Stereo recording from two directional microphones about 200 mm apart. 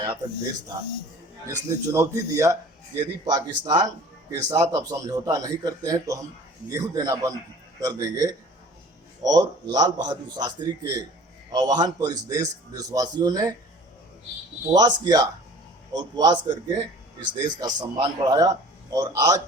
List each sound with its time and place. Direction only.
1.5 s a man's voice: 15° right (ahead or behind)
14.7 s a man's voice: 20° right (ahead or behind)